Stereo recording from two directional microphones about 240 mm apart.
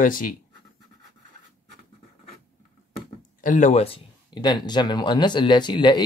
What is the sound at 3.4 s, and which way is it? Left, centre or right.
Speech, left.